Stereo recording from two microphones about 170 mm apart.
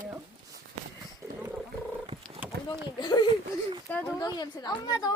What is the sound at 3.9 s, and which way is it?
Speech, 10° left (ahead or behind).